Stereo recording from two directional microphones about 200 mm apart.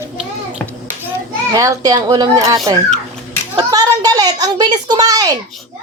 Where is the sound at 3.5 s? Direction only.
20° right (ahead or behind).